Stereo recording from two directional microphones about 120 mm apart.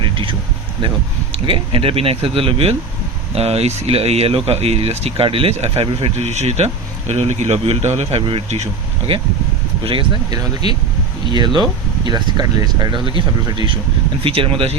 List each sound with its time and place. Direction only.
0.0 s a sound: 45° right (ahead or behind)
0.8 s speech: 45° right (ahead or behind); by 8.7 s 65° right (ahead or behind)
9.8 s speech: 45° right (ahead or behind)
11.3 s speech: 40° right (ahead or behind)